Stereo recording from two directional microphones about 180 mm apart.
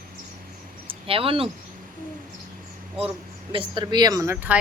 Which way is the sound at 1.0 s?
30° right (ahead or behind).